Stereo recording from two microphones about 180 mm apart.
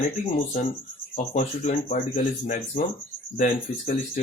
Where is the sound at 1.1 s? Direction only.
40° left (ahead or behind).